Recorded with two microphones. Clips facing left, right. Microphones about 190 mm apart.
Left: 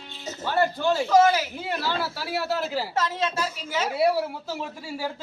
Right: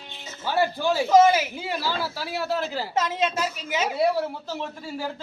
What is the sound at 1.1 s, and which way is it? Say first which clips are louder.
Speech: right 3 dB; 20° right (ahead or behind).